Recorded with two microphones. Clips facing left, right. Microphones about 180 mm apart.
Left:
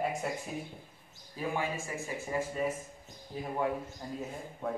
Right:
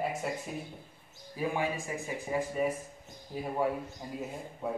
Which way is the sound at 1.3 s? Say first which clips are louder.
Right 2 dB; 15° right (ahead or behind).